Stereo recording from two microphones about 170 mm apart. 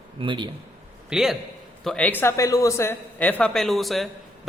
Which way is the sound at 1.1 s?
5° right (ahead or behind).